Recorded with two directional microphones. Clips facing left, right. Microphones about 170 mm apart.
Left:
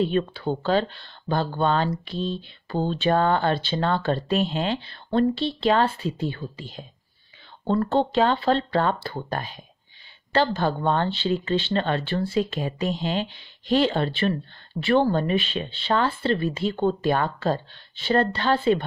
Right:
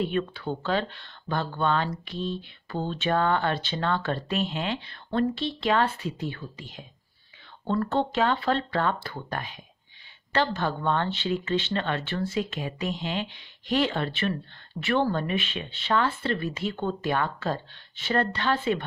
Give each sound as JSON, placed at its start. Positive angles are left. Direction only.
{"t": 0.0, "sound": "speech", "side_deg": 30}